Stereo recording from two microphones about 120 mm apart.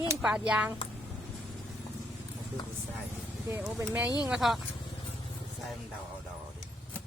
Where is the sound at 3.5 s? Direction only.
20° right (ahead or behind).